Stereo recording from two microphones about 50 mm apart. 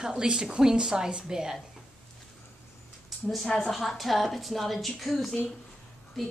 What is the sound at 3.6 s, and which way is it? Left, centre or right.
A woman's voice, centre.